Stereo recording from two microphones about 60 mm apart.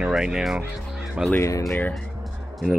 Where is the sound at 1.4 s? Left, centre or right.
Left.